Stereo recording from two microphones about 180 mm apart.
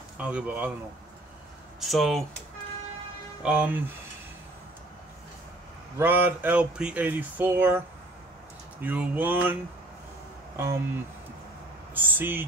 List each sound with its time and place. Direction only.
0.2 s speech: 5° right (ahead or behind)
1.8 s speech: centre (ahead or behind)
3.4 s speech: 10° right (ahead or behind)
5.9 s speech: 10° right (ahead or behind)
8.8 s speech: 10° right (ahead or behind)
11.9 s speech: 10° right (ahead or behind)